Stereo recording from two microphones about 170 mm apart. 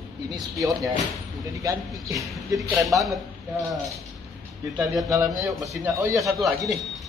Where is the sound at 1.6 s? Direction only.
20° right (ahead or behind).